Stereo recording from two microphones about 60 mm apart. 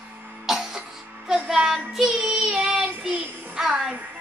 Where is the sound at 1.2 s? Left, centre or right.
Centre.